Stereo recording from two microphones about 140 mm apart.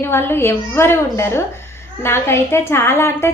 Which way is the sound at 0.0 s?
15° left (ahead or behind).